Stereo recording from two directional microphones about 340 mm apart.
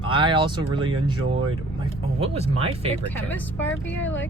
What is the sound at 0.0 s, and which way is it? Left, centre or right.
Speech, centre.